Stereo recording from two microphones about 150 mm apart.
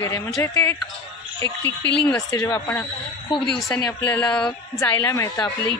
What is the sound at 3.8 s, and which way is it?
Speech, 20° left (ahead or behind).